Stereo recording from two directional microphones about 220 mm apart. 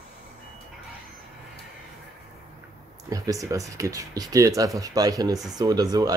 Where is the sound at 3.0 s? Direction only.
15° right (ahead or behind).